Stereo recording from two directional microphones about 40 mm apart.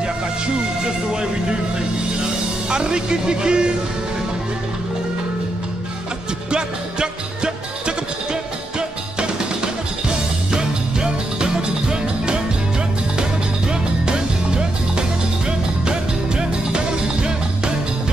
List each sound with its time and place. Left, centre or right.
2.7 s speech: right
6.5 s music: right